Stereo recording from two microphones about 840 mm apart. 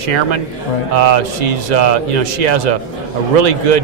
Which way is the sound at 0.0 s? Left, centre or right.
Right.